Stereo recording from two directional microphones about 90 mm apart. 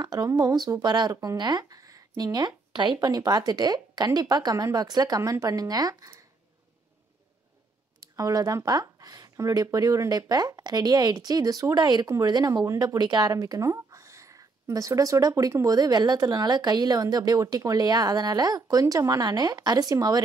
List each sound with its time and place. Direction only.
0.0 s speech: 45° right (ahead or behind)
1.1 s speech: 40° right (ahead or behind); by 3.0 s 60° right (ahead or behind)
3.0 s speech: 45° right (ahead or behind)
8.0 s speech: 45° right (ahead or behind)